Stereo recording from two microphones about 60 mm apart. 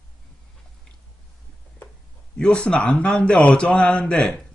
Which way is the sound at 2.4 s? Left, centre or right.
Centre.